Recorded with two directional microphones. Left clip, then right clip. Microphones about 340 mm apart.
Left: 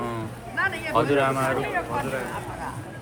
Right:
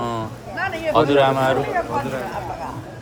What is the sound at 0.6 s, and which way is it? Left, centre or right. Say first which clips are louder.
Speech: right 3 dB; right.